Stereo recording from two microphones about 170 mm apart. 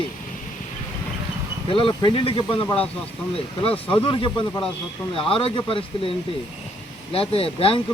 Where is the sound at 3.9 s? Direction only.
30° left (ahead or behind).